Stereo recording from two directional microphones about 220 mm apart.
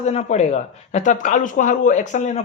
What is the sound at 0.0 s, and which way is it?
Speech, 30° left (ahead or behind).